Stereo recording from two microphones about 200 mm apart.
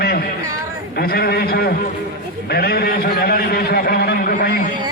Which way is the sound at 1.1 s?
50° left (ahead or behind).